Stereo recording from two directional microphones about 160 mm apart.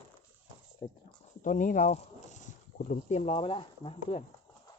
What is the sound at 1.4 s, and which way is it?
Speech, 55° left (ahead or behind).